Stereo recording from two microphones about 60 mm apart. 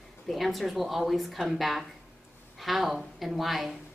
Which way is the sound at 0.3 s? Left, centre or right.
Centre.